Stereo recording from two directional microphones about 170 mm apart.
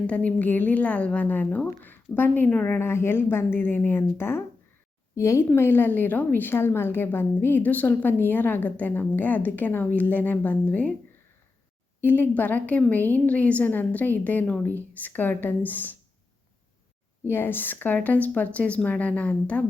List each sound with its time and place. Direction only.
0.1 s speech: 10° left (ahead or behind)
11.9 s speech: 10° left (ahead or behind)
17.2 s speech: 15° left (ahead or behind)